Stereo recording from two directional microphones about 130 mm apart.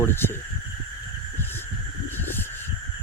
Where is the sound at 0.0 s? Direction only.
20° left (ahead or behind).